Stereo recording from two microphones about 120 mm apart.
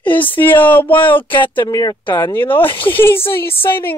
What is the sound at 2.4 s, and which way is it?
Speech, 45° left (ahead or behind).